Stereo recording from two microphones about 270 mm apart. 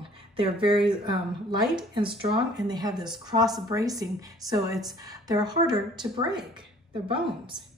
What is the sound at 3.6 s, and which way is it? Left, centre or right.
A woman's voice, centre.